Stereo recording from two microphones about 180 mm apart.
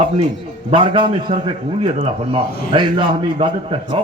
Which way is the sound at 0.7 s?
25° right (ahead or behind).